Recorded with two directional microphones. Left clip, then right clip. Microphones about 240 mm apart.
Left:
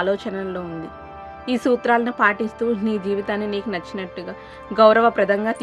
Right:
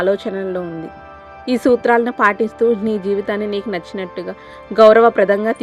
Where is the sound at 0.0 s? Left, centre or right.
Right.